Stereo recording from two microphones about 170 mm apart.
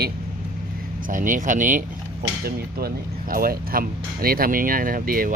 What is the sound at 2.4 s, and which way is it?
Speech, 65° right (ahead or behind).